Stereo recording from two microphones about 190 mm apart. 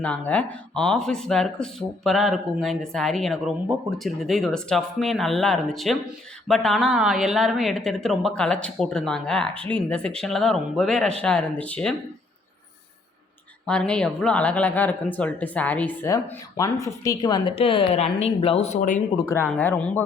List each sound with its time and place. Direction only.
0.3 s speech: 5° left (ahead or behind)
13.7 s a woman's voice: 5° left (ahead or behind); by 19.0 s 35° left (ahead or behind)
19.1 s speech: 15° left (ahead or behind)